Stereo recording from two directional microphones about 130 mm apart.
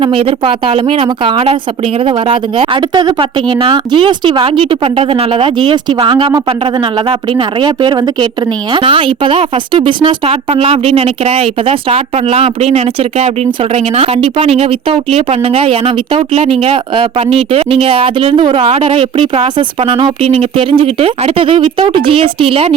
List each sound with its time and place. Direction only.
0.0 s a woman's voice: 45° right (ahead or behind)